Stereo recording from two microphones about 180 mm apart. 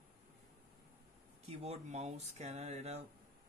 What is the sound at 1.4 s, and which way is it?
Speech, 35° right (ahead or behind).